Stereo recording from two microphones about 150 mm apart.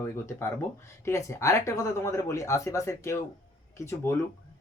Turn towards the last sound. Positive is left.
turn(degrees=15)  # may be behind; listen again after turning